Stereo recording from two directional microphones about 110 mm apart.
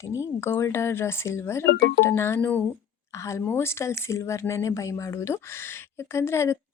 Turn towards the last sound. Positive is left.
turn(degrees=25)  # may be behind; listen again after turning